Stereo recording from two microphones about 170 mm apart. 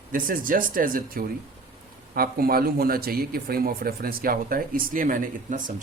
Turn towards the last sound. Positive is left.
turn(degrees=-50)  # may be behind; listen again after turning